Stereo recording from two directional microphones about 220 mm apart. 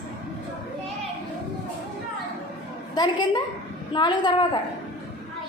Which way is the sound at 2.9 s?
20° left (ahead or behind).